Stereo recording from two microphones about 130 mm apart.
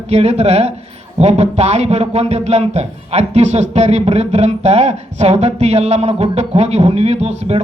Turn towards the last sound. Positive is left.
turn(degrees=-55)  # may be behind; listen again after turning